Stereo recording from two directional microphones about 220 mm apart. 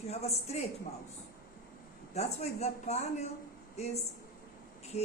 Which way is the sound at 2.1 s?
30° left (ahead or behind).